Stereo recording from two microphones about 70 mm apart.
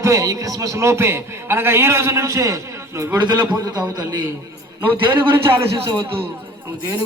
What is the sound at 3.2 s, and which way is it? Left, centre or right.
Speech, right.